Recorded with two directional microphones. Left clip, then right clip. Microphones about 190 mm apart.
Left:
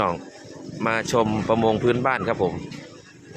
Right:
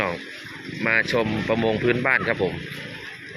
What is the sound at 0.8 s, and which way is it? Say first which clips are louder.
Speech: right 1 dB; 15° left (ahead or behind).